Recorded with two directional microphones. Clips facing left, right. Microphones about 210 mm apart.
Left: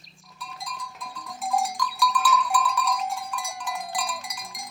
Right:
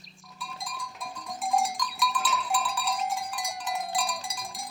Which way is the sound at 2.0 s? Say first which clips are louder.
Left 4 dB; 25° right (ahead or behind).